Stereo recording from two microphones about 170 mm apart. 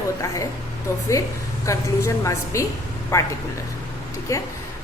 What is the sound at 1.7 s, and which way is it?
A woman's voice, 20° left (ahead or behind).